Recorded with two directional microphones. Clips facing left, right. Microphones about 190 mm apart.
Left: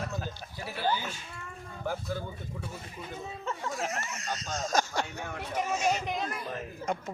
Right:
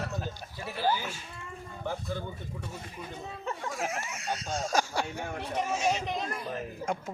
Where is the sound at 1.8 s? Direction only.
5° left (ahead or behind).